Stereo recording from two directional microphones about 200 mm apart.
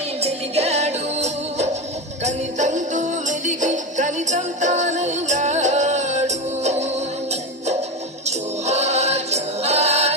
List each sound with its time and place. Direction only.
0.2 s music: 30° right (ahead or behind)
8.2 s music: 35° right (ahead or behind)